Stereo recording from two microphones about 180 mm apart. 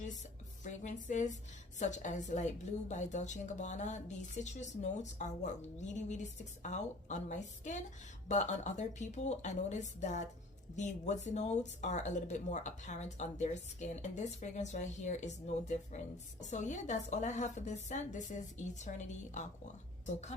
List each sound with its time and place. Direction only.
0.6 s speech: 45° left (ahead or behind)